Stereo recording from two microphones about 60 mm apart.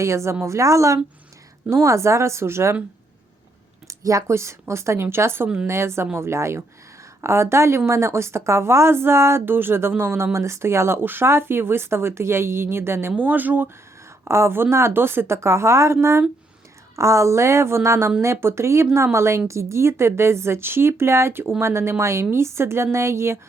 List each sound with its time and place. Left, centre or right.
0.0 s a woman's voice: right
3.8 s speech: right
13.1 s speech: right
14.3 s speech: right